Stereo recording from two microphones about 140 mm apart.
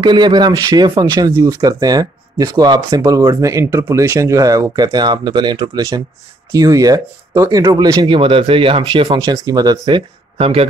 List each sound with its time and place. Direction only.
0.0 s speech: 30° right (ahead or behind)
5.8 s speech: 20° right (ahead or behind)
10.3 s speech: 45° right (ahead or behind)